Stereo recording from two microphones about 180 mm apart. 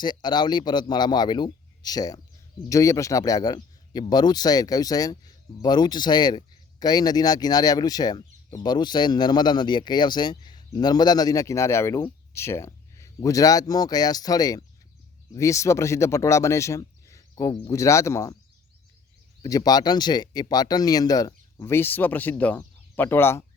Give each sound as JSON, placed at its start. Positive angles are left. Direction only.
{"t": 0.0, "sound": "speech", "side_deg": 25}
{"t": 19.4, "sound": "speech", "side_deg": 20}